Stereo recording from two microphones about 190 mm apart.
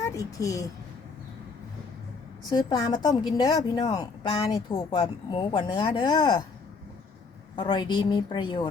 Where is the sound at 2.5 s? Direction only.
20° left (ahead or behind).